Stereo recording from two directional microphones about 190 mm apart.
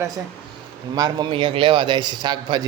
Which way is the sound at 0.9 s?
20° right (ahead or behind).